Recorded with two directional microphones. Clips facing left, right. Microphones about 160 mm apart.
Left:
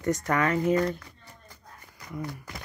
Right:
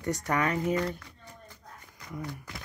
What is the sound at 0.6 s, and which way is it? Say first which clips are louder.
Speech: left 4 dB; 40° left (ahead or behind).